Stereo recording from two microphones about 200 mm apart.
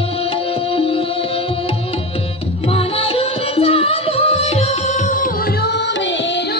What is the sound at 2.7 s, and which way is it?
Music, 25° left (ahead or behind).